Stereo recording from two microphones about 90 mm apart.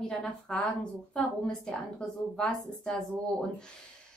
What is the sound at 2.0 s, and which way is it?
A woman's voice, 10° left (ahead or behind).